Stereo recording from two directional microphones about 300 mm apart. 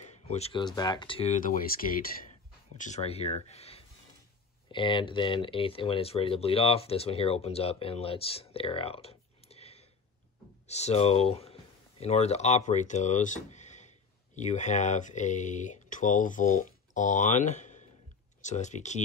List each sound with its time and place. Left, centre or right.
0.0 s speech: left
2.8 s speech: left